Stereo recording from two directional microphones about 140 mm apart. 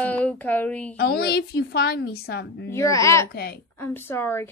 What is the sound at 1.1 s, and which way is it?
Speech, 90° left.